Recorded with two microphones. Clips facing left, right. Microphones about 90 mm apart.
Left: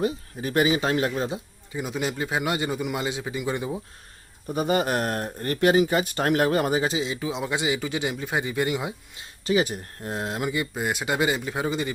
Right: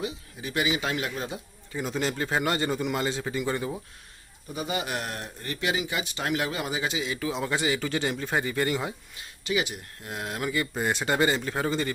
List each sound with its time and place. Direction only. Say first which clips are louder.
0.0 s speech: left 7 dB; 45° left (ahead or behind)
1.7 s speech: left 1 dB; 10° left (ahead or behind)
4.4 s speech: left 8 dB; 45° left (ahead or behind); by 9.0 s 15° left (ahead or behind)
9.1 s speech: left 6 dB; 30° left (ahead or behind)
10.8 s speech: right 2 dB; 5° left (ahead or behind)